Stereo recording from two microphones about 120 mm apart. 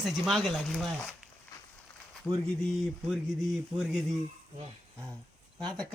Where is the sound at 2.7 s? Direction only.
Centre (ahead or behind).